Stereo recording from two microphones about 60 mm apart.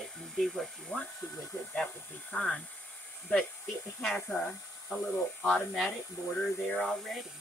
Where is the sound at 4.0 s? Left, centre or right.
Centre.